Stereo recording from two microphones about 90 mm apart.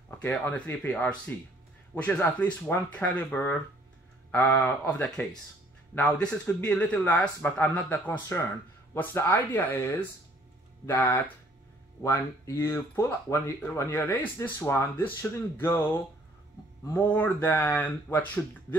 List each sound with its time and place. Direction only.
0.2 s speech: 20° left (ahead or behind)
16.9 s speech: 20° left (ahead or behind)